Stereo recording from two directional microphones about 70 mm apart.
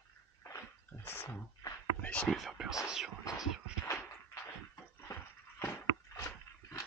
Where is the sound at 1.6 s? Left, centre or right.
Left.